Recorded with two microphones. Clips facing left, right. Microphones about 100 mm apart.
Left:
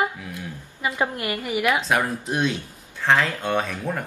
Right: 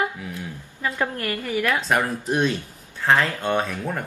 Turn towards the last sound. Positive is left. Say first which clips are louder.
# right 1 dB
turn(degrees=0)  # may be behind; listen again after turning